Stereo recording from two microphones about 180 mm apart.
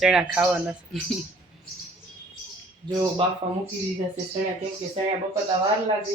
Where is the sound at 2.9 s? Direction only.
25° right (ahead or behind).